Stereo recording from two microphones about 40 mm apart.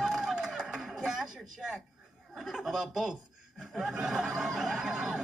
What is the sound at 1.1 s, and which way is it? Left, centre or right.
Snicker, centre.